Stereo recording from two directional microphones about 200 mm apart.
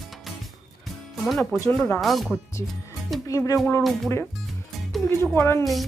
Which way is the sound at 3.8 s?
Centre (ahead or behind).